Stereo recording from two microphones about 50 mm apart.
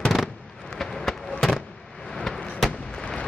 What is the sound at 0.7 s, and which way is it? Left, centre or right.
Fireworks, centre.